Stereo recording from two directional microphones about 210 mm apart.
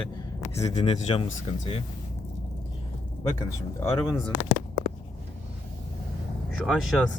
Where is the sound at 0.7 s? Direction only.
30° left (ahead or behind).